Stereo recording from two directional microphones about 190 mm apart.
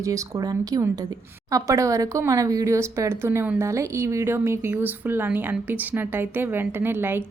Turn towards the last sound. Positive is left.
turn(degrees=-10)  # may be behind; listen again after turning